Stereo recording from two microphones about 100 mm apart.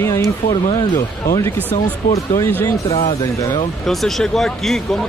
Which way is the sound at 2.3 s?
25° left (ahead or behind).